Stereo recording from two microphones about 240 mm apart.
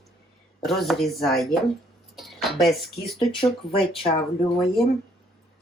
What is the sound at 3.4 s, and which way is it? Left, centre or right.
Speech, left.